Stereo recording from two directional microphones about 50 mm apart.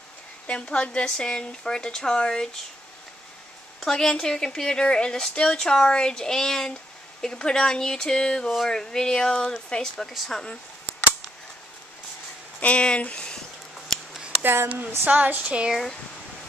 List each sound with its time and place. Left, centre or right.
0.5 s speech: left
3.8 s speech: centre
10.0 s speech: centre
12.5 s speech: left
14.4 s speech: right
15.0 s speech: right